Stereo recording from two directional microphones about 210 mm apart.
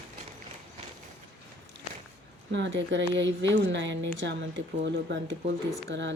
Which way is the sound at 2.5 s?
60° right (ahead or behind).